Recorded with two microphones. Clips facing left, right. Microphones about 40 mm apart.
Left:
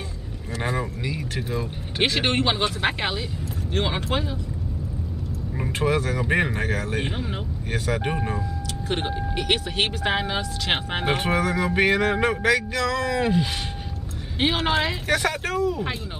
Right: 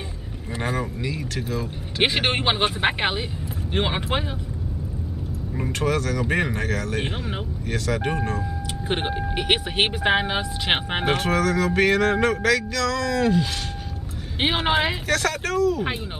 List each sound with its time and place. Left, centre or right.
0.6 s vehicle: centre
1.3 s speech: centre
2.0 s speech: centre
5.7 s speech: left
6.2 s speech: centre
7.0 s speech: centre
7.7 s speech: centre
8.8 s speech: right
11.1 s speech: centre
14.4 s speech: right
15.0 s speech: centre